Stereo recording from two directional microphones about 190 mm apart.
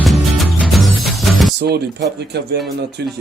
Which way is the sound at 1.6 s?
60° right (ahead or behind).